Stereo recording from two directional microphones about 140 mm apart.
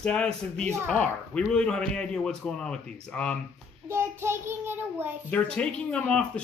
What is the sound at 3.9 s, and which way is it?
A child's voice, 20° right (ahead or behind).